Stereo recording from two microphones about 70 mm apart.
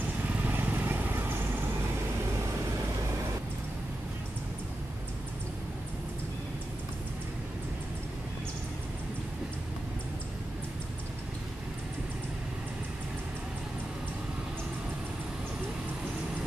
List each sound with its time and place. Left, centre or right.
0.3 s vehicle: right